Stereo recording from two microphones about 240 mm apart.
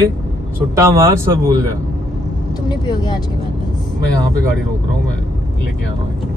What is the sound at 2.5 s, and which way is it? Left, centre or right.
Speech, centre.